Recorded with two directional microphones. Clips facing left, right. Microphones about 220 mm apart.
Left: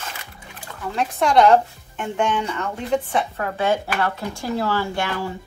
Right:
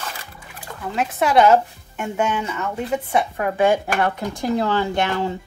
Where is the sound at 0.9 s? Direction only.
5° right (ahead or behind).